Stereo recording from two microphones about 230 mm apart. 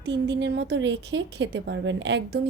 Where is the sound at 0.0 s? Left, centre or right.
Right.